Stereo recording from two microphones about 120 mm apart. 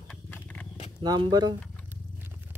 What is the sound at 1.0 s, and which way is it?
Speech, 35° right (ahead or behind).